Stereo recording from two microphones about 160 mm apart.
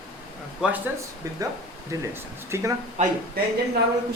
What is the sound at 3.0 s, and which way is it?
Speech, 45° right (ahead or behind).